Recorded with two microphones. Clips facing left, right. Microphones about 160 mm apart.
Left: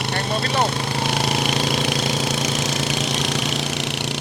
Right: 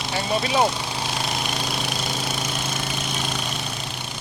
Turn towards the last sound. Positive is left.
turn(degrees=75)  # may be behind; listen again after turning